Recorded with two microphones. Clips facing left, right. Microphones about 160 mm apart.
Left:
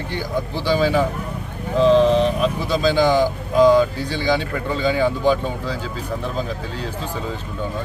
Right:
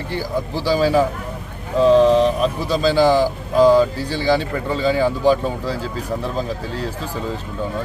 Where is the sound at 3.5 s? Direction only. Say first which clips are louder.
Right 1 dB; 35° right (ahead or behind).